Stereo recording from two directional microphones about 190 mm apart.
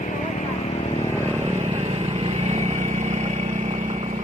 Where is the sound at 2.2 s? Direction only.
35° right (ahead or behind).